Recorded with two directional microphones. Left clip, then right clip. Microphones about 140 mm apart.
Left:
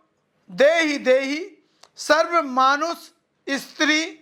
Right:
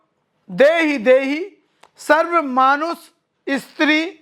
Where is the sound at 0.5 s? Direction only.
30° right (ahead or behind).